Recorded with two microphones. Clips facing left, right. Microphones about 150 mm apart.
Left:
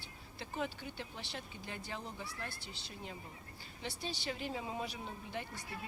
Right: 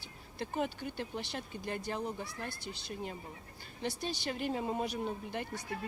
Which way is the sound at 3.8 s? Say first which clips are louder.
Right 5 dB; 55° right (ahead or behind).